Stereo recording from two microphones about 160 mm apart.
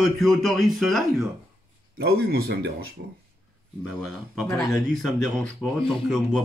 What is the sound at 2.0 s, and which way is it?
Speech, 75° right (ahead or behind).